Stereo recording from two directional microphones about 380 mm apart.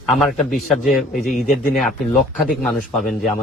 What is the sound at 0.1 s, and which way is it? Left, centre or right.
A man's voice, centre.